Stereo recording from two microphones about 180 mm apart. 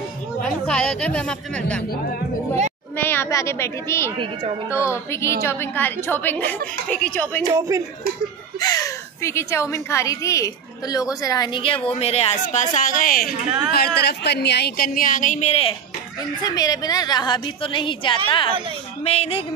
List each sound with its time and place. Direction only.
0.4 s a woman's voice: 5° left (ahead or behind)
3.0 s a woman's voice: 15° left (ahead or behind)
7.5 s speech: 15° right (ahead or behind)
8.5 s a woman's voice: 20° left (ahead or behind); by 13.3 s 50° left (ahead or behind)
13.7 s a woman's voice: 60° left (ahead or behind); by 15.7 s 35° left (ahead or behind)
16.4 s a woman's voice: 20° left (ahead or behind)